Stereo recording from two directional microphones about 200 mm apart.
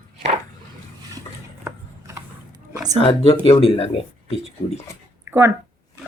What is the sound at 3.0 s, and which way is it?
Speech, 30° left (ahead or behind).